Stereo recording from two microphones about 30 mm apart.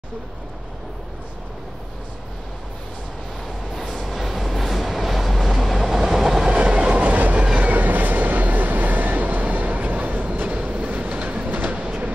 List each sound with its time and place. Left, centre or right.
3.9 s train: centre
6.6 s train: right
7.6 s train: right
11.4 s train: right